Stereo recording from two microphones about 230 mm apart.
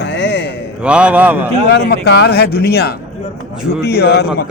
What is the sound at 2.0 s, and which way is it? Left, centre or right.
A man's voice, left.